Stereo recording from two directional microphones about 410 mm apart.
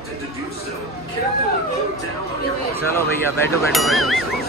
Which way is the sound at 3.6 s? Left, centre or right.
Centre.